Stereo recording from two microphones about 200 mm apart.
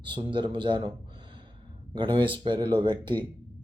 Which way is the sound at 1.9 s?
25° right (ahead or behind).